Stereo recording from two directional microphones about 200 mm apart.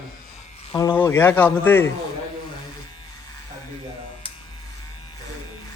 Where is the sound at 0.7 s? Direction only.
20° left (ahead or behind).